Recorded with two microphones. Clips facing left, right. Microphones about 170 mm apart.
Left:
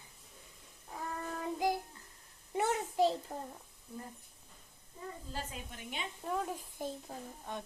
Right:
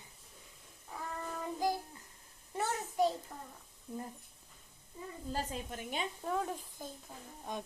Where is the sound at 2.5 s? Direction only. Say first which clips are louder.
Left 2 dB; 20° left (ahead or behind).